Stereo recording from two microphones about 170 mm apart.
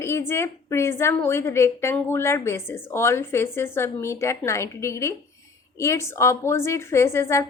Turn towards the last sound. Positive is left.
turn(degrees=15)  # may be behind; listen again after turning